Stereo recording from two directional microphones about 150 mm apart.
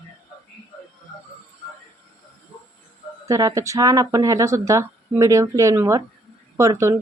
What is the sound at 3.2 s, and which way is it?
Speech, 20° right (ahead or behind).